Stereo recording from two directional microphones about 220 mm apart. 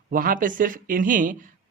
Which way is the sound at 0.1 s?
40° right (ahead or behind).